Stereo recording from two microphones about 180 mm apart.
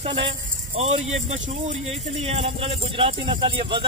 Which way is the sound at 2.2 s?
35° right (ahead or behind).